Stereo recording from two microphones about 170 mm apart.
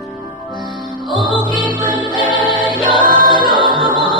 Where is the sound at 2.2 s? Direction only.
30° left (ahead or behind).